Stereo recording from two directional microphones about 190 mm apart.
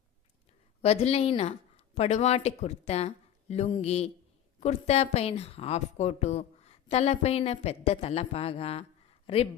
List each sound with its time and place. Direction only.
0.8 s a woman's voice: 35° left (ahead or behind)